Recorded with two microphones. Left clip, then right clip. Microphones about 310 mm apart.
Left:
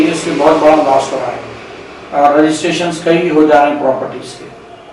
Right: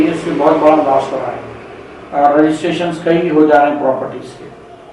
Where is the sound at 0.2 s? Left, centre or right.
Centre.